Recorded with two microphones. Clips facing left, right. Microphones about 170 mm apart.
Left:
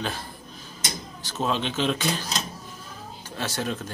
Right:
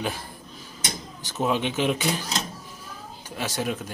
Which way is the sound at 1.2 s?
15° right (ahead or behind).